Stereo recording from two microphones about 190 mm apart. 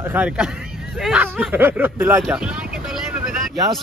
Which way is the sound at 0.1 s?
5° right (ahead or behind).